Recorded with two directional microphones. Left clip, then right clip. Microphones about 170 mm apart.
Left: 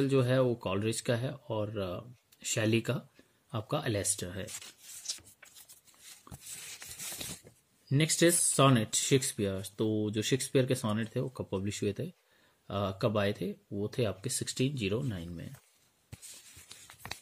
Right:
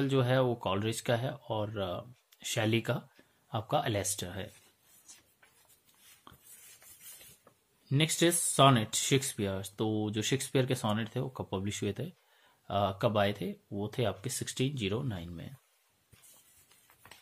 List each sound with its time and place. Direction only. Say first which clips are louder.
0.0 s speech: left 1 dB; 20° left (ahead or behind)
7.9 s speech: left 1 dB; 25° left (ahead or behind)
16.6 s a sound: left 12 dB; 50° left (ahead or behind)